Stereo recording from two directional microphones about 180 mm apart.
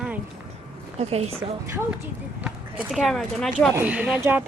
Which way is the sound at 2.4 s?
5° right (ahead or behind).